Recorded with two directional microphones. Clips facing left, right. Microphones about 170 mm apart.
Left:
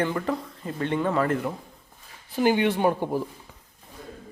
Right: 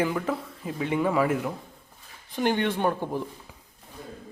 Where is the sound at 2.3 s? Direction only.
5° left (ahead or behind).